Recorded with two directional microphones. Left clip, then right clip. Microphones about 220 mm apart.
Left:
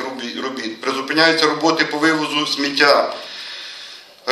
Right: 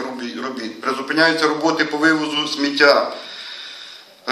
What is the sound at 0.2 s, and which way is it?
A man's voice, 45° left (ahead or behind).